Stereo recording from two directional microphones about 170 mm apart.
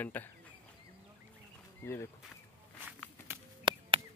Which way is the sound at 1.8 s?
15° left (ahead or behind).